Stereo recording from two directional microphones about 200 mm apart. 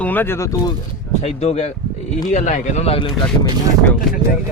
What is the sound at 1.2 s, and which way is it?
Speech, 30° left (ahead or behind).